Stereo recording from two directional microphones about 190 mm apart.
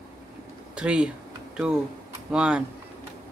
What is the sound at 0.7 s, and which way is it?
Speech, 5° right (ahead or behind).